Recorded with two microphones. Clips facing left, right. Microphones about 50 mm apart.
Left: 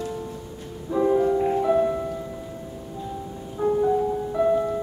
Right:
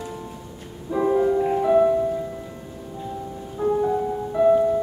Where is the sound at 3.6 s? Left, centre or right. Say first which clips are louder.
Right 1 dB; left.